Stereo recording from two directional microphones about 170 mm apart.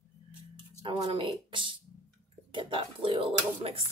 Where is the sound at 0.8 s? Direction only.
30° right (ahead or behind).